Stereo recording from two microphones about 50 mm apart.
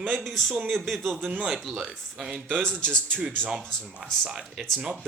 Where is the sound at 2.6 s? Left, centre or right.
Centre.